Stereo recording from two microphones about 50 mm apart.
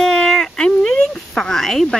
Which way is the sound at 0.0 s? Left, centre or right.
Centre.